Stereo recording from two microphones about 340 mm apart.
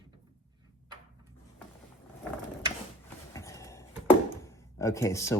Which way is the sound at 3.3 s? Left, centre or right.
Centre.